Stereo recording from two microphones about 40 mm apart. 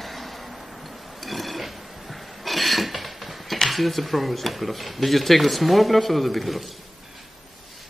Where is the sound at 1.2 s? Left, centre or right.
Centre.